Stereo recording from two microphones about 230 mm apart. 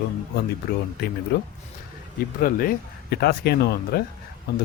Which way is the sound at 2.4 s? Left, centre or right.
Left.